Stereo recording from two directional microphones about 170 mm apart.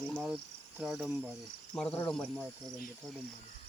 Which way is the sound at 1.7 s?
5° left (ahead or behind).